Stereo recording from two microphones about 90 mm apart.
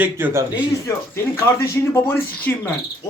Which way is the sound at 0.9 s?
30° left (ahead or behind).